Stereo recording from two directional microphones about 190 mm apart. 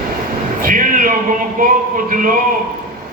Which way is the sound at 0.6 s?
45° right (ahead or behind).